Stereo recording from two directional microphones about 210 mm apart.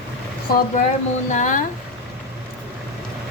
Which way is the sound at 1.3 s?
35° left (ahead or behind).